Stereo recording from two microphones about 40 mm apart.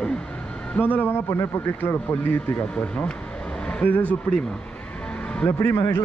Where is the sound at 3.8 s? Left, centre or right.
Left.